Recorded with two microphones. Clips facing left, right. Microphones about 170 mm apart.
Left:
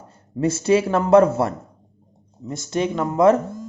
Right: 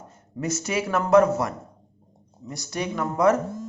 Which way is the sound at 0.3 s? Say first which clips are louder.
Left 9 dB; 30° left (ahead or behind).